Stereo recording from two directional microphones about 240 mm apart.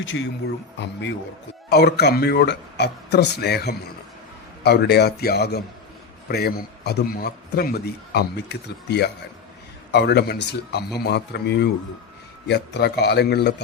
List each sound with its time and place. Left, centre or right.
0.0 s a man's voice: left